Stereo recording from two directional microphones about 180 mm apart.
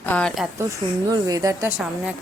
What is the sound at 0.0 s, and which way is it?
Speech, 5° left (ahead or behind).